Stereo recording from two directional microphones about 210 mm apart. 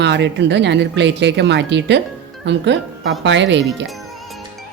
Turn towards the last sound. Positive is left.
turn(degrees=-55)  # may be behind; listen again after turning